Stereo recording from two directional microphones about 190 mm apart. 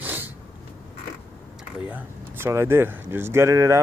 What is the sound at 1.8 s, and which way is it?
Speech, 10° right (ahead or behind).